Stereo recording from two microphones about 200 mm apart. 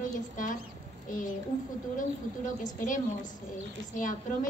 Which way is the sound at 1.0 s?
40° left (ahead or behind).